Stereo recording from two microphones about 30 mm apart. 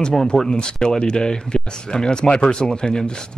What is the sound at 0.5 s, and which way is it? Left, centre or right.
Speech, left.